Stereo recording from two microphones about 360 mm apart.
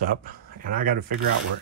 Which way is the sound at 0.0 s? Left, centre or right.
Right.